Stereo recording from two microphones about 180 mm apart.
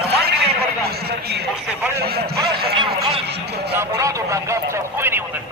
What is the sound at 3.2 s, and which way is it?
Speech, 65° right (ahead or behind).